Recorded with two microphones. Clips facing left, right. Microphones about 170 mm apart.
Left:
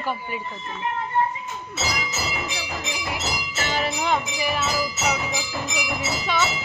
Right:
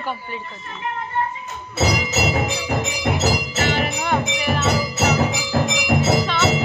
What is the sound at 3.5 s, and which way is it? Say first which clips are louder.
Music: right 5 dB; 55° right (ahead or behind).